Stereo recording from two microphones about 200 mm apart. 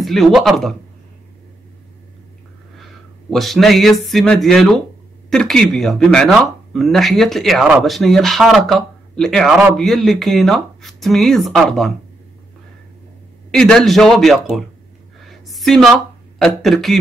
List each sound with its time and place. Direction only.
0.0 s speech: centre (ahead or behind)
2.8 s a sound: centre (ahead or behind)
5.3 s speech: 5° left (ahead or behind)
13.5 s speech: 5° left (ahead or behind)
15.1 s a sound: centre (ahead or behind)
16.3 s speech: centre (ahead or behind)